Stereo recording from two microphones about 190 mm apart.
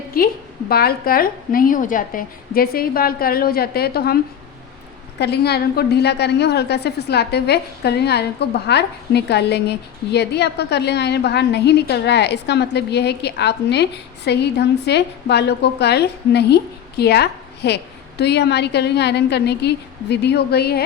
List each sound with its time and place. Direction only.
0.1 s a woman's voice: 50° left (ahead or behind)
5.2 s a woman's voice: 60° left (ahead or behind)